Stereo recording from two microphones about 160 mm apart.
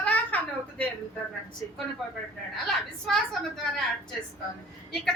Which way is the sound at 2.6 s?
Centre (ahead or behind).